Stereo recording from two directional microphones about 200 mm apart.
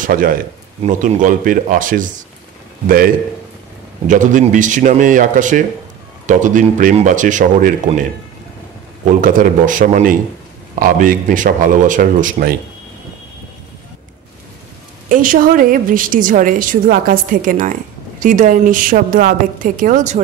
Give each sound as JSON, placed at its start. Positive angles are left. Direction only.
{"t": 0.0, "sound": "a man's voice", "side_deg": -45}
{"t": 4.1, "sound": "a woman's voice", "side_deg": -40}
{"t": 9.2, "sound": "a woman's voice", "side_deg": -40}
{"t": 15.0, "sound": "a woman's voice", "side_deg": -45}